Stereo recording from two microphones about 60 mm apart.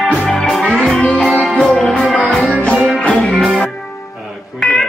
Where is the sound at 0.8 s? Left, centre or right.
Left.